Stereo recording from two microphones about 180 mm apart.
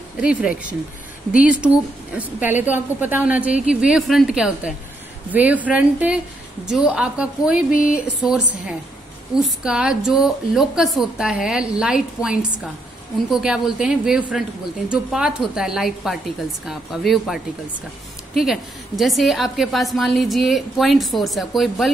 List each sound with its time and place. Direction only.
0.2 s a woman's voice: 5° right (ahead or behind)
18.4 s a woman's voice: centre (ahead or behind)